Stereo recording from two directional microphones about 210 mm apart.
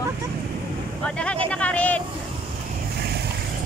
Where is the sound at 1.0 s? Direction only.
5° left (ahead or behind).